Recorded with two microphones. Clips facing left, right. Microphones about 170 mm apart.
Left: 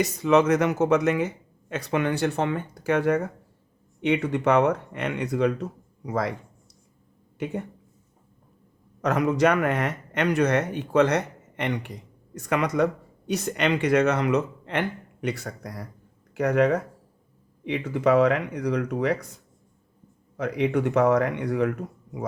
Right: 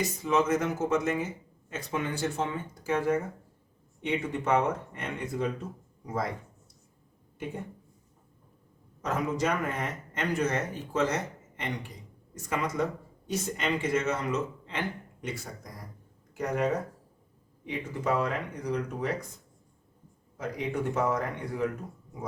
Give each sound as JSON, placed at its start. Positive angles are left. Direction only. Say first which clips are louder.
{"t": 0.0, "sound": "speech", "louder": "left 7 dB", "side_deg": 75}
{"t": 7.3, "sound": "speech", "louder": "left 7 dB", "side_deg": 75}
{"t": 9.0, "sound": "speech", "louder": "left 8 dB", "side_deg": 70}
{"t": 20.3, "sound": "speech", "louder": "left 8 dB", "side_deg": 70}